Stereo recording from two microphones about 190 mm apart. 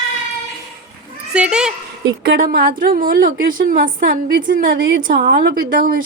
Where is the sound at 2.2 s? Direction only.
50° right (ahead or behind).